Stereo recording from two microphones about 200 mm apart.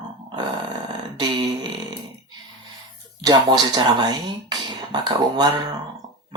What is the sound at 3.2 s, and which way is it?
Speech, 20° right (ahead or behind).